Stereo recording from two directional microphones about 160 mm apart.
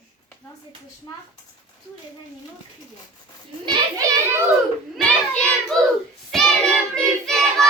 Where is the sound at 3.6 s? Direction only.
20° right (ahead or behind).